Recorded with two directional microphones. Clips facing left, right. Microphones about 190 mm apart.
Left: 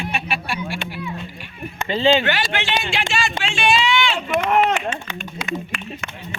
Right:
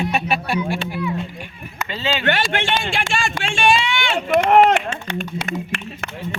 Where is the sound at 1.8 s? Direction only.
30° left (ahead or behind).